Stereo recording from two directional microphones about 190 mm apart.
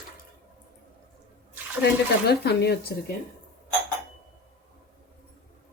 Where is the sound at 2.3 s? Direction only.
60° left (ahead or behind).